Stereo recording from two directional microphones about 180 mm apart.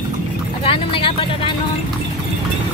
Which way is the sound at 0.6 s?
30° left (ahead or behind).